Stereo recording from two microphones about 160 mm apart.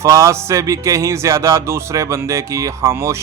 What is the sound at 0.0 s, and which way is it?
Speech, 20° right (ahead or behind).